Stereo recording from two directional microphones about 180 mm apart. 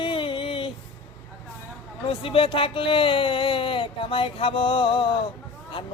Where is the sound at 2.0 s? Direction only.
30° left (ahead or behind).